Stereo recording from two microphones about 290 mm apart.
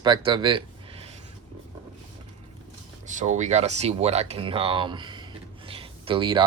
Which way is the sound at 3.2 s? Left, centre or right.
Right.